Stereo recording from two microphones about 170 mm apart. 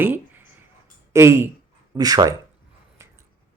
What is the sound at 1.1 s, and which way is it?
Speech, 15° right (ahead or behind).